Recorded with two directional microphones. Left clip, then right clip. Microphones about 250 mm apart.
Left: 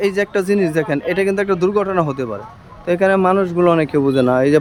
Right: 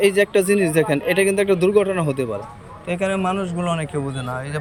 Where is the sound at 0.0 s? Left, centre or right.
Centre.